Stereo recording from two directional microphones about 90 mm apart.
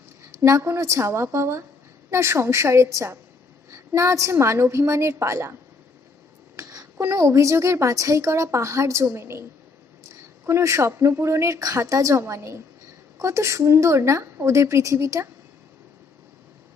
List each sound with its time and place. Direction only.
0.4 s speech: 35° right (ahead or behind)
6.6 s a sound: 40° right (ahead or behind)
7.0 s speech: 30° right (ahead or behind)